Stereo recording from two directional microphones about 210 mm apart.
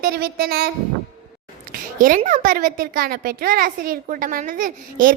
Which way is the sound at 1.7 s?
40° right (ahead or behind).